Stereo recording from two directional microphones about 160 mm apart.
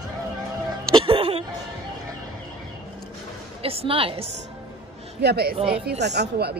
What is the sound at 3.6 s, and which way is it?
Speech, 35° right (ahead or behind).